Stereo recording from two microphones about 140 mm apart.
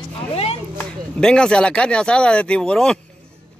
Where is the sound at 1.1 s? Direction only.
5° left (ahead or behind).